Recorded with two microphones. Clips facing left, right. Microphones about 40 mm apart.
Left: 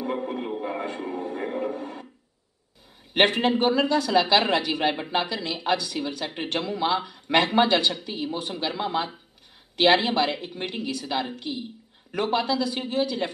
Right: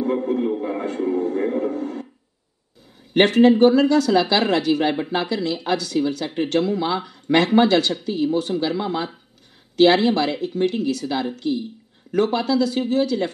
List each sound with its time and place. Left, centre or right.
0.0 s a sound: centre
0.5 s music: centre
3.1 s speech: left